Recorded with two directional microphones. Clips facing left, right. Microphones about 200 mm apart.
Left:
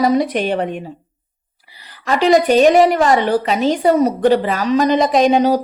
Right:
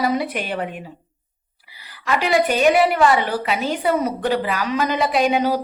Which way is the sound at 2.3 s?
40° left (ahead or behind).